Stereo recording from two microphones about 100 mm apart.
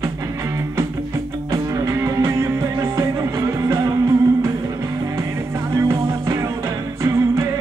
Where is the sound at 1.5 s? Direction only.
35° right (ahead or behind).